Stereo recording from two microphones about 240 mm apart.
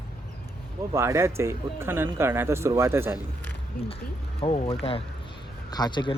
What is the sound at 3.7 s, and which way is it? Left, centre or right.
Speech, left.